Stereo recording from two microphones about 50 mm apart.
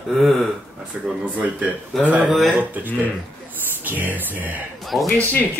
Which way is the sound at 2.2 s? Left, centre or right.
Centre.